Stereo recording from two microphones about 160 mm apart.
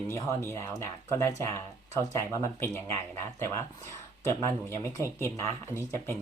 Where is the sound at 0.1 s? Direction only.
15° left (ahead or behind).